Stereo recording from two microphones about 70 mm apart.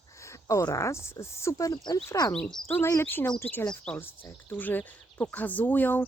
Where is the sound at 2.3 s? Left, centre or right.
Centre.